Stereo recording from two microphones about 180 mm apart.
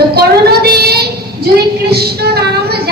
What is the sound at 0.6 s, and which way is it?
Child singing, 60° right (ahead or behind).